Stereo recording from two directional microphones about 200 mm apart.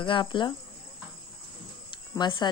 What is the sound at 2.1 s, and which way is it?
Speech, 20° left (ahead or behind).